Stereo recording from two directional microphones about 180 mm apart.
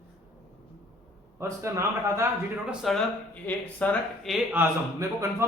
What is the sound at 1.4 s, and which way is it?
Speech, 15° right (ahead or behind).